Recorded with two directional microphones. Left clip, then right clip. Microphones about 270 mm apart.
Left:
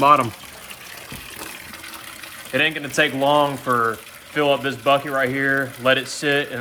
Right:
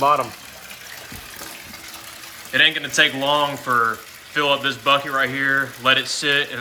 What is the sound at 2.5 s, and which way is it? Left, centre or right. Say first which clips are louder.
Speech: right 4 dB; centre.